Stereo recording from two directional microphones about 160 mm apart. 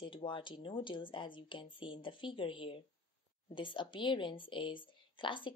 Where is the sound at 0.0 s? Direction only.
30° left (ahead or behind).